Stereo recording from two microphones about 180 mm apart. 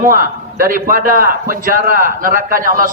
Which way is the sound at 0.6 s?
50° right (ahead or behind).